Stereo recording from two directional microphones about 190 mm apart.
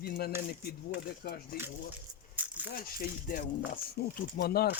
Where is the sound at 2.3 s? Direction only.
10° right (ahead or behind).